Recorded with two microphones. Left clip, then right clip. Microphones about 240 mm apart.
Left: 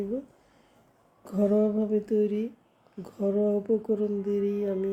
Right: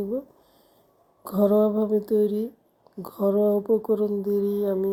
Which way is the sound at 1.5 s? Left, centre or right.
Centre.